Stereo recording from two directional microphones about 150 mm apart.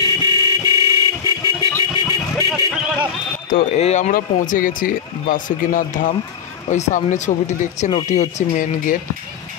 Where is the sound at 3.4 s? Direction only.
65° left (ahead or behind).